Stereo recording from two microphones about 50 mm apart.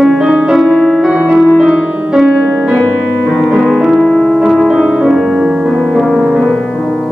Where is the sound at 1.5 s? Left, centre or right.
Centre.